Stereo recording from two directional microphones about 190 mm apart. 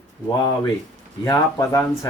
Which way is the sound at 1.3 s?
15° left (ahead or behind).